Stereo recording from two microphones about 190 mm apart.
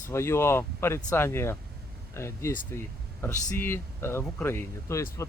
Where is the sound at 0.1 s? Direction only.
15° left (ahead or behind).